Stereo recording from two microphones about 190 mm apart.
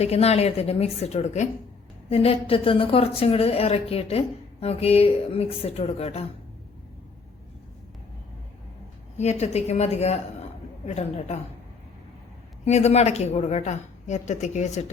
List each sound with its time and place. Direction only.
0.0 s a woman's voice: 35° left (ahead or behind)
9.1 s a woman's voice: 35° left (ahead or behind)
12.6 s a woman's voice: 35° left (ahead or behind)